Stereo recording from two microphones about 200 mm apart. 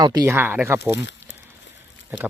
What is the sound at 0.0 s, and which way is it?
Speech, 20° right (ahead or behind).